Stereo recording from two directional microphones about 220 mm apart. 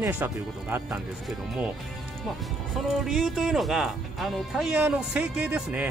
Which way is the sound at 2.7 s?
Centre (ahead or behind).